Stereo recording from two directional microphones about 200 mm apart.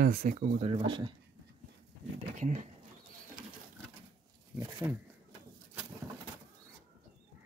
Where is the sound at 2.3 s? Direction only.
35° right (ahead or behind).